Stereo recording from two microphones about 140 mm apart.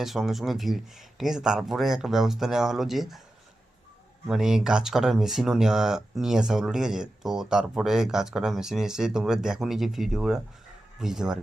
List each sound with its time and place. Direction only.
0.0 s speech: centre (ahead or behind)
4.3 s speech: 5° right (ahead or behind)